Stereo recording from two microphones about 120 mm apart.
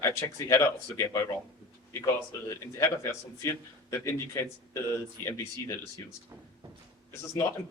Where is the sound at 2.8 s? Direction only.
25° left (ahead or behind).